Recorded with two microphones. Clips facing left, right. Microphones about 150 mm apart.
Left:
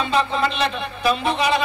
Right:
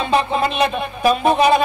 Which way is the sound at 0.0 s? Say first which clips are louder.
Right 3 dB; 55° right (ahead or behind).